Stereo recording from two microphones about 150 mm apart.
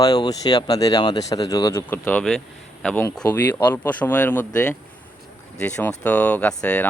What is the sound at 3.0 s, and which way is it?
Speech, 15° left (ahead or behind).